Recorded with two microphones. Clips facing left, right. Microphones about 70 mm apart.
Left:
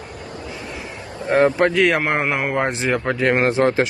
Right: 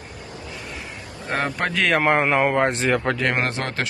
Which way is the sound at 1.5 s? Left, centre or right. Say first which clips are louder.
Left 5 dB; centre.